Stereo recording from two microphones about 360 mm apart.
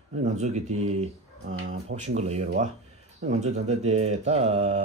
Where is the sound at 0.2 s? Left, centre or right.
Centre.